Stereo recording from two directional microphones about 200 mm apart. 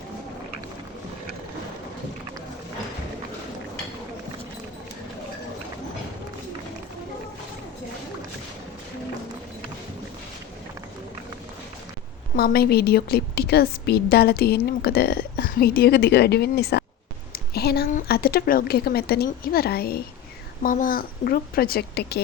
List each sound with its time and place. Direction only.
12.4 s a woman's voice: 50° left (ahead or behind)